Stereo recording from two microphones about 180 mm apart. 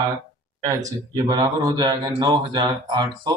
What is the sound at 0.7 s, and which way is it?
Speech, 20° right (ahead or behind).